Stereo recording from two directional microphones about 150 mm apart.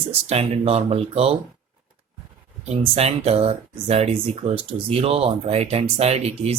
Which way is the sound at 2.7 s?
45° right (ahead or behind).